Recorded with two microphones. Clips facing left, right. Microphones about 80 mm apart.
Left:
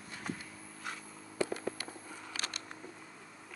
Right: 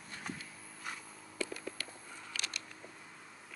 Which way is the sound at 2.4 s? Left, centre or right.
Left.